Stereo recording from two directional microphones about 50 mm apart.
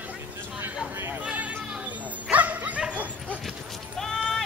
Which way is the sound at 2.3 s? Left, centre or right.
Right.